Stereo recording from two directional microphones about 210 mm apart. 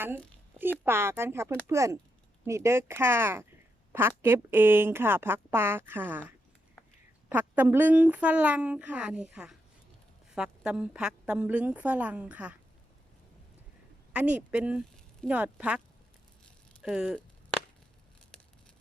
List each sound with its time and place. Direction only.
0.5 s speech: 10° right (ahead or behind)
14.1 s speech: 5° right (ahead or behind)
16.4 s chop: 5° right (ahead or behind)